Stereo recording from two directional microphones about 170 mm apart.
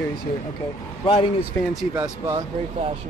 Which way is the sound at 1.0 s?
35° left (ahead or behind).